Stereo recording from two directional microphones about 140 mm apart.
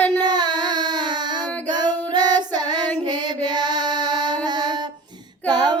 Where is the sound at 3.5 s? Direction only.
30° right (ahead or behind).